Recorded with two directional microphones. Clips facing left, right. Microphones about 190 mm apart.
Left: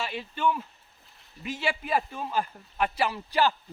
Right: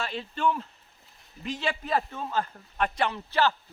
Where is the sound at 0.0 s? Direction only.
5° left (ahead or behind).